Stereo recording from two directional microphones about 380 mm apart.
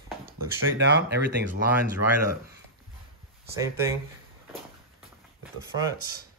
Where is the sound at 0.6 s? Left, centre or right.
Right.